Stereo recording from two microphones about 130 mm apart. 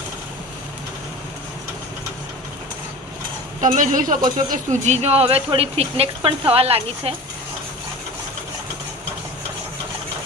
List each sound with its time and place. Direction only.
3.8 s a man's voice: 80° right
4.4 s speech: 65° right (ahead or behind); by 7.1 s 50° right (ahead or behind)